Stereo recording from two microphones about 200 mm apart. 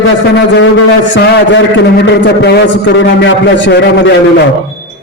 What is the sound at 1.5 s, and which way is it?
A man's voice, 65° left (ahead or behind).